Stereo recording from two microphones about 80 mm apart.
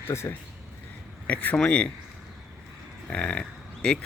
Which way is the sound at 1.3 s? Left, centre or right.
Centre.